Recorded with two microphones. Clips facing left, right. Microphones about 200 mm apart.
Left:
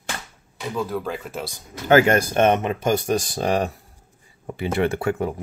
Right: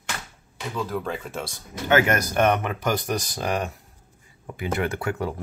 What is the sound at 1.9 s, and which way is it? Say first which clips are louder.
Speech: left 5 dB; 30° left (ahead or behind).